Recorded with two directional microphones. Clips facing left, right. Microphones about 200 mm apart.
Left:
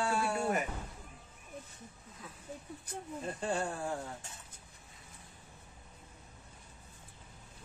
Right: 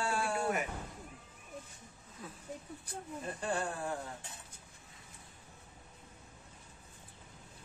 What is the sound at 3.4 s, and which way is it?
Speech, 25° left (ahead or behind).